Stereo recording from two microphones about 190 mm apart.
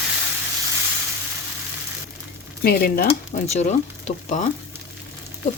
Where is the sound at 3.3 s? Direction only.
35° left (ahead or behind).